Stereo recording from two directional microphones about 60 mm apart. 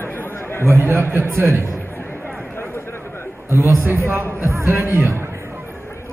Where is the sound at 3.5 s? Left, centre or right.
Right.